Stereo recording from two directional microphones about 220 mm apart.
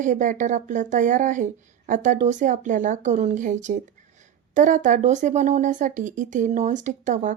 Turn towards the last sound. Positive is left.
turn(degrees=-35)  # may be behind; listen again after turning